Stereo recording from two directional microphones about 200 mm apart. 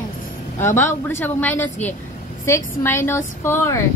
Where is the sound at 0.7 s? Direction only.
10° left (ahead or behind).